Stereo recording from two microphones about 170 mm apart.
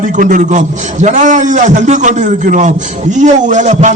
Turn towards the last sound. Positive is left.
turn(degrees=-45)  # may be behind; listen again after turning